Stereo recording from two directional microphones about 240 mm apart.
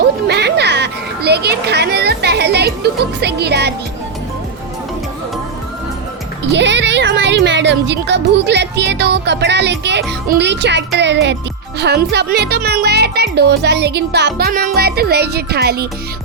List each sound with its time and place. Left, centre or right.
0.3 s children playing: right
6.4 s speech: right